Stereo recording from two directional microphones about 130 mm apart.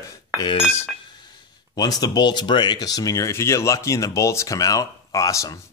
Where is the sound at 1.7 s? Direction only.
30° left (ahead or behind).